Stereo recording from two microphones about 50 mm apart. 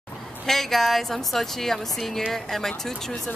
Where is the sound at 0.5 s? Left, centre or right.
Centre.